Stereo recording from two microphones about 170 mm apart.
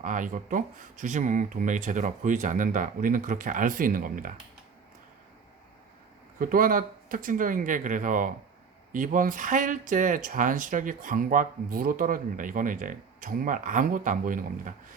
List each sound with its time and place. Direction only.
0.0 s speech: 50° right (ahead or behind)
6.4 s speech: 55° right (ahead or behind)